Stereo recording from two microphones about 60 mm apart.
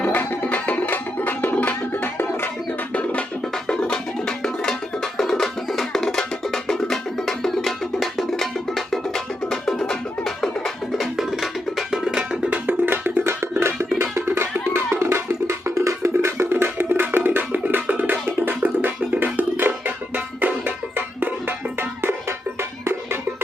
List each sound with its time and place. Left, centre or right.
0.0 s music: left
2.9 s music: left
10.9 s music: centre
12.5 s music: right